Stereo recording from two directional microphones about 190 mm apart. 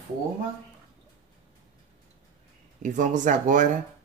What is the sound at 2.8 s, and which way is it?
Speech, 40° right (ahead or behind).